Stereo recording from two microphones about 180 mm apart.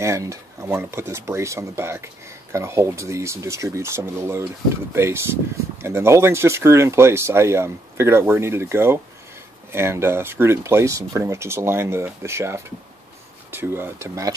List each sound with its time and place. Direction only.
0.0 s speech: 15° right (ahead or behind)